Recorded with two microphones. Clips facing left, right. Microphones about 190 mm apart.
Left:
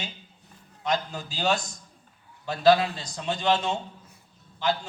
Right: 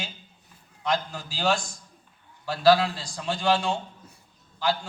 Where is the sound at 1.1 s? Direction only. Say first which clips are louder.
Right 1 dB; centre (ahead or behind).